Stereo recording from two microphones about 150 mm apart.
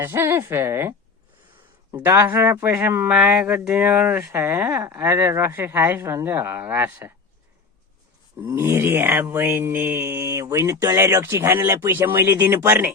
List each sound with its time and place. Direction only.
0.0 s speech: 15° right (ahead or behind)
8.4 s speech: 15° right (ahead or behind)